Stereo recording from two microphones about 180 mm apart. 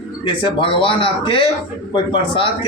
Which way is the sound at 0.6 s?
30° left (ahead or behind).